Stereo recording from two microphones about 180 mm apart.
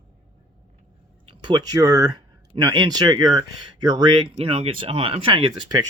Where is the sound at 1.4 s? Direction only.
20° right (ahead or behind).